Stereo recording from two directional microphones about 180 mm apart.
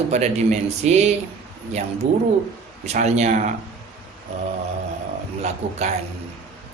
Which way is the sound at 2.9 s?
40° right (ahead or behind).